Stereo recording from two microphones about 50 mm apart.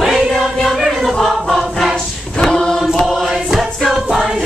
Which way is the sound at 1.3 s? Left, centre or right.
Centre.